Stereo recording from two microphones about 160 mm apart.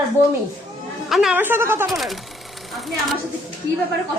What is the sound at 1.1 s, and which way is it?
Speech, 5° right (ahead or behind).